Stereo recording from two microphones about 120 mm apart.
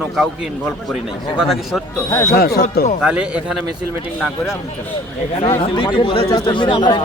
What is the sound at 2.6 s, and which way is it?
Speech, 90° left.